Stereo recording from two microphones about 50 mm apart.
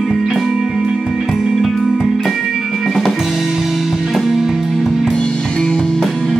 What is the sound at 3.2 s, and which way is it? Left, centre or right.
Music, centre.